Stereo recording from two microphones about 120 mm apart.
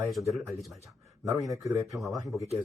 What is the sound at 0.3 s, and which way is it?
Speech, centre (ahead or behind).